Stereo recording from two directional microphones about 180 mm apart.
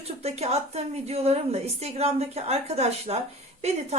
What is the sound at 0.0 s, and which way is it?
A woman's voice, 35° right (ahead or behind).